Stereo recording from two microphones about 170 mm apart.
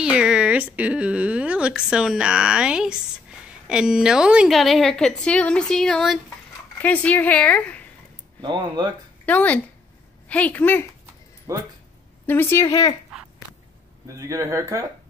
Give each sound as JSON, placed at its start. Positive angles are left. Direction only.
{"t": 0.0, "sound": "a woman's voice", "side_deg": -5}
{"t": 8.4, "sound": "speech", "side_deg": -25}
{"t": 9.2, "sound": "speech", "side_deg": 10}
{"t": 11.5, "sound": "speech", "side_deg": -20}
{"t": 12.3, "sound": "speech", "side_deg": 15}
{"t": 14.0, "sound": "speech", "side_deg": -20}